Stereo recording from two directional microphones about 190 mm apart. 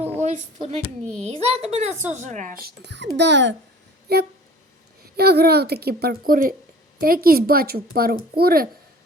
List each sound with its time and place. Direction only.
0.2 s a woman's voice: 35° right (ahead or behind); by 3.5 s 65° right (ahead or behind)
4.1 s a child's voice: 55° right (ahead or behind)